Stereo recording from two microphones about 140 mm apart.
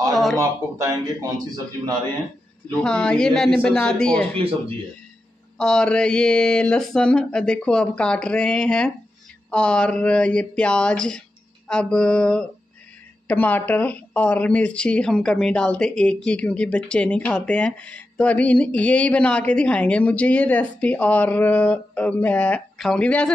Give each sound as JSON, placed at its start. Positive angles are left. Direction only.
{"t": 0.1, "sound": "a man's voice", "side_deg": 0}
{"t": 0.4, "sound": "speech", "side_deg": -20}
{"t": 2.8, "sound": "a woman's voice", "side_deg": 5}
{"t": 4.4, "sound": "speech", "side_deg": -40}
{"t": 5.6, "sound": "speech", "side_deg": 5}